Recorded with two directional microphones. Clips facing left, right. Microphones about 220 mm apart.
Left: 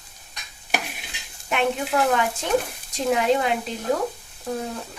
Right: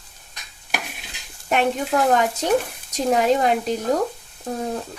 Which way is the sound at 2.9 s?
40° right (ahead or behind).